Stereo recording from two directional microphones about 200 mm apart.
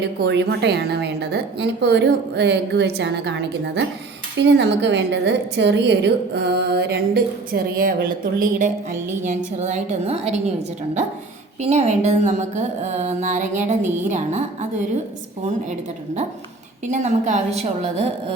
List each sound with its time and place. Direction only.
0.2 s a woman's voice: 55° right (ahead or behind); by 10.4 s 35° right (ahead or behind)
11.6 s speech: 35° right (ahead or behind)
16.9 s a woman's voice: 35° right (ahead or behind)